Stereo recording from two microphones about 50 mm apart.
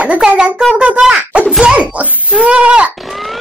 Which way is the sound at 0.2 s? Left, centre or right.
Centre.